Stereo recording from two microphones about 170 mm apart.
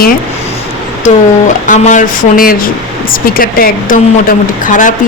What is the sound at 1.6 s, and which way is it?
A woman's voice, 45° left (ahead or behind).